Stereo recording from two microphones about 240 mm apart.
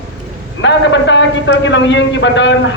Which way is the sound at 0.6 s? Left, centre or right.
Left.